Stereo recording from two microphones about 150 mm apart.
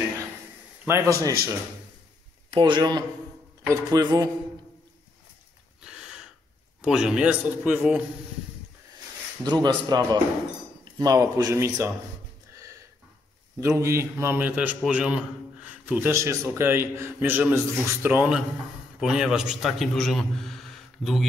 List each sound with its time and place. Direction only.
0.8 s speech: 20° right (ahead or behind)
2.5 s speech: 30° right (ahead or behind)
5.9 s gasp: 5° right (ahead or behind)
6.8 s a man's voice: 5° right (ahead or behind)
9.4 s speech: 30° right (ahead or behind)
13.6 s a man's voice: 20° right (ahead or behind); by 21.3 s centre (ahead or behind)